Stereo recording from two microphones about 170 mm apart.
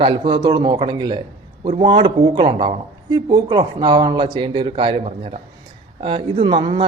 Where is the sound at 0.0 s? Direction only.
25° right (ahead or behind).